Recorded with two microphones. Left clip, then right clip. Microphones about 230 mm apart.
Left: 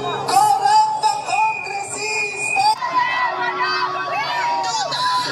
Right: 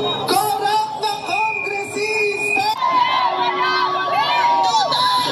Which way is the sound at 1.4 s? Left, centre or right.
Left.